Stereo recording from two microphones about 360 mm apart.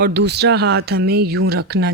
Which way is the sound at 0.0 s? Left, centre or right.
Right.